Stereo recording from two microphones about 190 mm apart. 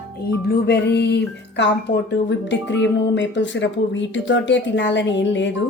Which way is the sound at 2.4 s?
70° left (ahead or behind).